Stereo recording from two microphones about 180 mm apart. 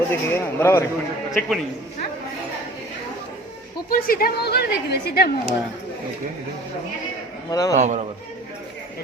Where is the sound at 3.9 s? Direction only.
55° left (ahead or behind).